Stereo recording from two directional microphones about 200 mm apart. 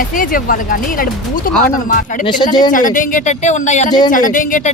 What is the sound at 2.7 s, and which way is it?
A woman's voice, 40° left (ahead or behind).